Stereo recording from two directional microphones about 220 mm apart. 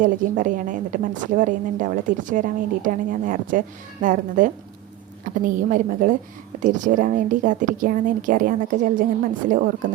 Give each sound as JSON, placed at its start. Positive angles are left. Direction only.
{"t": 0.0, "sound": "a woman's voice", "side_deg": -35}